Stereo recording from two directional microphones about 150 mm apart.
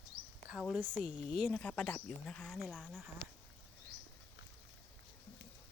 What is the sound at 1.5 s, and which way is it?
Speech, 10° left (ahead or behind).